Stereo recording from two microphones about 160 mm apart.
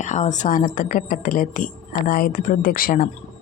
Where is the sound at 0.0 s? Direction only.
50° left (ahead or behind).